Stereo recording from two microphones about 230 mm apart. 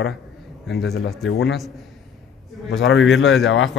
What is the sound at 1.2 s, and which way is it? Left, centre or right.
Speech, centre.